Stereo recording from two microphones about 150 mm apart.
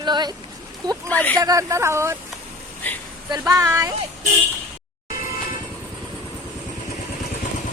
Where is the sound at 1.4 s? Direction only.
20° right (ahead or behind).